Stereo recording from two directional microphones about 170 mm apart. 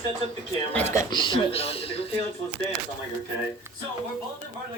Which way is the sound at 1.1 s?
30° left (ahead or behind).